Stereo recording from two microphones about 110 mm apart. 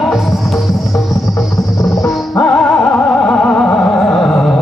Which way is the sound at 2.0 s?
30° left (ahead or behind).